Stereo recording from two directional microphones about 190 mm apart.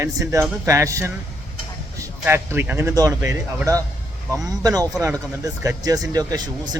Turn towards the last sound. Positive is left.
turn(degrees=-20)  # may be behind; listen again after turning